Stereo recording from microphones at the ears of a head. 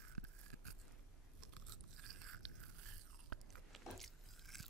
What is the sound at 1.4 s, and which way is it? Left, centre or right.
Crunch, right.